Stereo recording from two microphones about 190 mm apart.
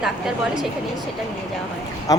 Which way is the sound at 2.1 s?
20° left (ahead or behind).